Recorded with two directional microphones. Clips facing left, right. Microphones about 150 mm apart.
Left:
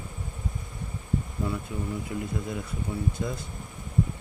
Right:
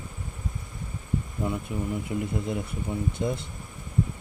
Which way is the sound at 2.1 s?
20° right (ahead or behind).